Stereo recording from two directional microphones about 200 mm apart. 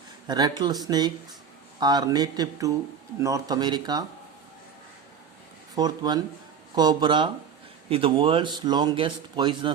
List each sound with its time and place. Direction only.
0.3 s speech: 20° right (ahead or behind)
5.7 s speech: 20° right (ahead or behind)